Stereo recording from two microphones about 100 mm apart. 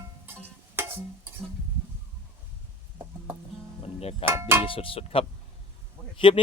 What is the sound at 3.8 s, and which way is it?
Music, 90° left.